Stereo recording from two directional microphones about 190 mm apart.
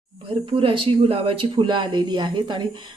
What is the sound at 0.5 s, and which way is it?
Speech, 30° right (ahead or behind).